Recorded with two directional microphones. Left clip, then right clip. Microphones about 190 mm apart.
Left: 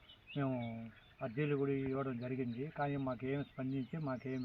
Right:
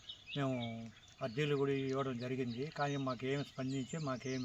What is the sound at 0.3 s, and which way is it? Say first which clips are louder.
Speech: right 1 dB; 15° right (ahead or behind).